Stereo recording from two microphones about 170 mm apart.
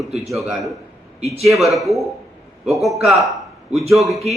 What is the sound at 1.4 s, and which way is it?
A man's voice, centre (ahead or behind).